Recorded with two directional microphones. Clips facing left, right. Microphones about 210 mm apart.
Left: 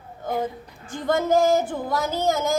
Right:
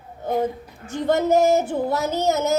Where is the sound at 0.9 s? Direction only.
25° right (ahead or behind).